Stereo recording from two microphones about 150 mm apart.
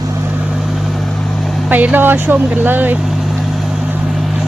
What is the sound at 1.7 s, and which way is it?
Speech, 10° right (ahead or behind).